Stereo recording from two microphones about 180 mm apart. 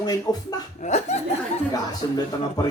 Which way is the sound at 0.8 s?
40° left (ahead or behind).